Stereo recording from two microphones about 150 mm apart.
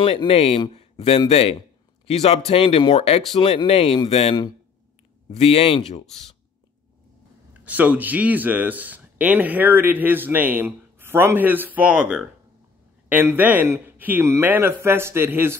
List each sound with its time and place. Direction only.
0.0 s speech: 40° left (ahead or behind)
7.6 s speech: 10° right (ahead or behind)